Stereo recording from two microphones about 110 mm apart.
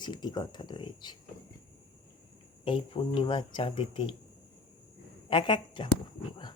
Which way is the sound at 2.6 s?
55° left (ahead or behind).